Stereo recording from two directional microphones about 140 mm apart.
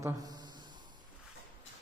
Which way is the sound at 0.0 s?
25° right (ahead or behind).